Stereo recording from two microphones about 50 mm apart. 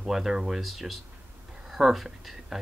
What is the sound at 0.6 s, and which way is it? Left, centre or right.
Speech, centre.